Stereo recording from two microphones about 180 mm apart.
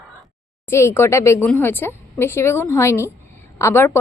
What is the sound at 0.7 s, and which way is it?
A woman's voice, 15° left (ahead or behind).